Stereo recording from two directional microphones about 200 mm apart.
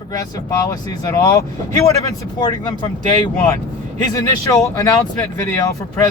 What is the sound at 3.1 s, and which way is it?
Speech, 15° left (ahead or behind).